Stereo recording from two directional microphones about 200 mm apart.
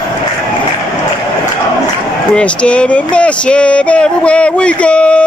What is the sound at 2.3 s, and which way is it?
Speech, 5° left (ahead or behind).